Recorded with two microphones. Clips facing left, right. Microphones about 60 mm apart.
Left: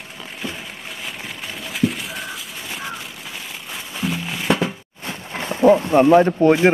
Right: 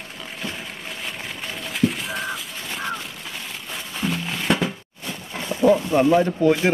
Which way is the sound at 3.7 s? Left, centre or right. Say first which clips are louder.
Left 1 dB; centre.